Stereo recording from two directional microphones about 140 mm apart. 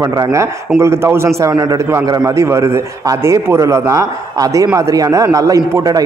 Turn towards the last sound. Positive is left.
turn(degrees=-25)  # may be behind; listen again after turning